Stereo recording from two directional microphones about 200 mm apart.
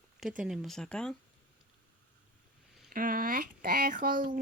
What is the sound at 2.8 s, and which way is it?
Speech, 45° right (ahead or behind).